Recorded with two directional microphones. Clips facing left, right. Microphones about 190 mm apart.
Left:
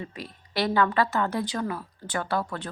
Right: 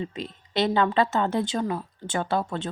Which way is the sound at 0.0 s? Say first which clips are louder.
Right 5 dB; 20° right (ahead or behind).